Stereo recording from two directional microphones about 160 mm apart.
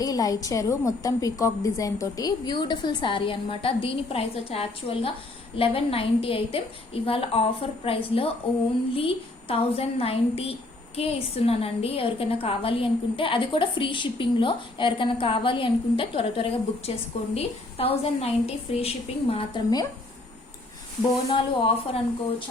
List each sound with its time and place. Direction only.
0.0 s a woman's voice: 20° left (ahead or behind)
21.2 s a woman's voice: 35° left (ahead or behind)